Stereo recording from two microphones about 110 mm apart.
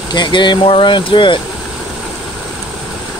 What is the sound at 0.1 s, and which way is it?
Speech, 45° left (ahead or behind).